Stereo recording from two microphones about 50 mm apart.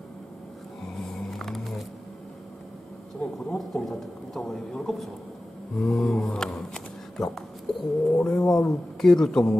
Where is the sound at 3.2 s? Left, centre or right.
Centre.